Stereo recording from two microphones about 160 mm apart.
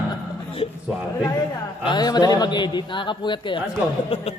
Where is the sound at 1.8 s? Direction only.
25° left (ahead or behind).